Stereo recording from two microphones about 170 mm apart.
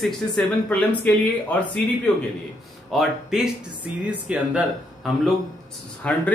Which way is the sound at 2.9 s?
Centre (ahead or behind).